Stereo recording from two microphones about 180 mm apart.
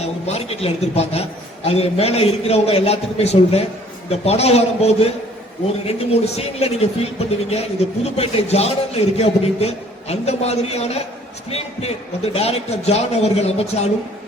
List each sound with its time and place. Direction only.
0.0 s a man's voice: 35° left (ahead or behind)